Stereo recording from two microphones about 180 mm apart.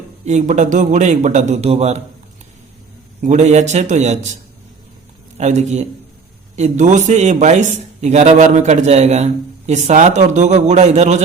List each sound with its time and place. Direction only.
0.3 s a man's voice: 40° right (ahead or behind)
3.2 s a man's voice: 40° right (ahead or behind)
5.4 s a man's voice: 40° right (ahead or behind)